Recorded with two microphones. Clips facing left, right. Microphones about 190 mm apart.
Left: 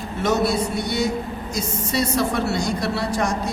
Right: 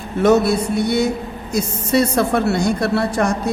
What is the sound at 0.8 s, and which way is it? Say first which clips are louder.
A man's voice: right 5 dB; 60° right (ahead or behind).